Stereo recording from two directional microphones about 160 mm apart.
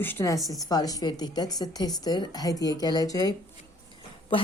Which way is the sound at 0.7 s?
25° left (ahead or behind).